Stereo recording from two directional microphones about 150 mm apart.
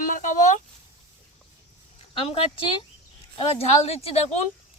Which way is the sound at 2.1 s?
35° left (ahead or behind).